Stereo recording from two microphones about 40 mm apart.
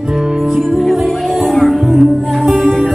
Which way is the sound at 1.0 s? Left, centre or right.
Centre.